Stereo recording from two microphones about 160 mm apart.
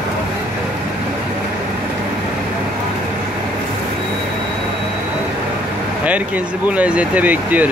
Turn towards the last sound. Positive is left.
turn(degrees=-10)  # may be behind; listen again after turning